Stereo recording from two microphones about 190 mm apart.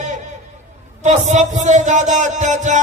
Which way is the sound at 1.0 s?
40° right (ahead or behind).